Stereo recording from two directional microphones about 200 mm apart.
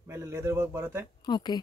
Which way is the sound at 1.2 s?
20° left (ahead or behind).